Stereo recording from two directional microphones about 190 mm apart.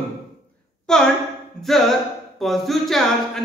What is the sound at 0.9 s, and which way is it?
Speech, 5° left (ahead or behind).